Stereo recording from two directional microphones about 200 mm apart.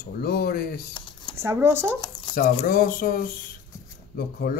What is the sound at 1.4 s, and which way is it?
Speech, 10° right (ahead or behind).